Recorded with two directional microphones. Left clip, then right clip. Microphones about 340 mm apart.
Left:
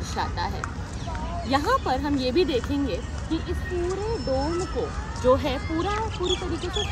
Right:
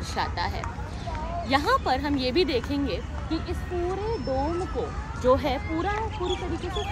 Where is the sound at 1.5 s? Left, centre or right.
Centre.